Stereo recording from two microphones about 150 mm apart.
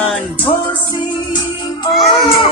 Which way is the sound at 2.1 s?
35° left (ahead or behind).